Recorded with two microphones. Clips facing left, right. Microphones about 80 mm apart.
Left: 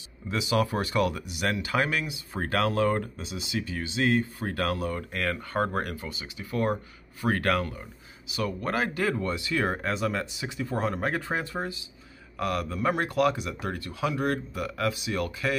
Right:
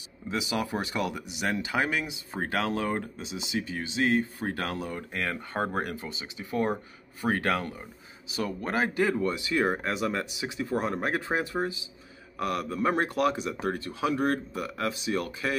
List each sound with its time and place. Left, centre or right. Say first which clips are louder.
0.3 s speech: left 3 dB; centre